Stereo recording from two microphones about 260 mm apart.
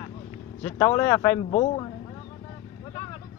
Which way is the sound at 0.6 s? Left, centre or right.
Centre.